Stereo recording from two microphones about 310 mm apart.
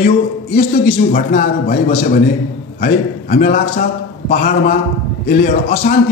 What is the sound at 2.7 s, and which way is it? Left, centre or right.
A man's voice, left.